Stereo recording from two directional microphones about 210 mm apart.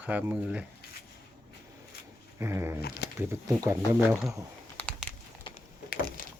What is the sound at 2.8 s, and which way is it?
Speech, 50° left (ahead or behind).